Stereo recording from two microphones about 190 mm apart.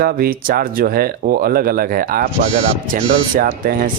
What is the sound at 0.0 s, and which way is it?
Speech, 50° right (ahead or behind).